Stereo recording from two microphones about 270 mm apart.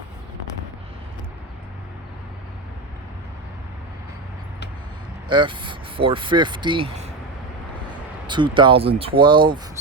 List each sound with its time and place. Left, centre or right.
5.3 s speech: centre
8.3 s speech: centre